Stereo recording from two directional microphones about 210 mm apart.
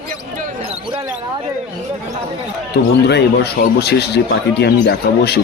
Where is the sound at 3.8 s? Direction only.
50° left (ahead or behind).